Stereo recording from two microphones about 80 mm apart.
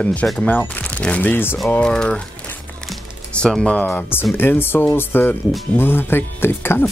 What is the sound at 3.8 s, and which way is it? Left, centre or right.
Speech, left.